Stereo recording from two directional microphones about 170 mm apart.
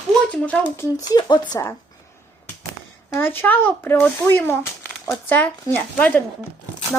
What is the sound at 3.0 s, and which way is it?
Speech, 10° left (ahead or behind).